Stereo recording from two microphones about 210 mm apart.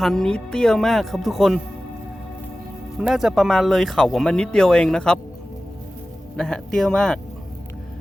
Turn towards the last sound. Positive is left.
turn(degrees=5)  # may be behind; listen again after turning